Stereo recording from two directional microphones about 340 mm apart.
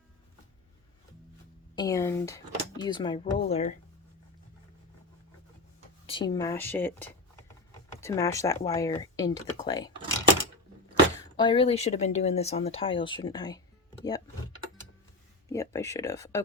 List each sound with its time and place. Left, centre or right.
1.7 s speech: centre
6.1 s speech: centre
11.3 s speech: centre
15.4 s speech: centre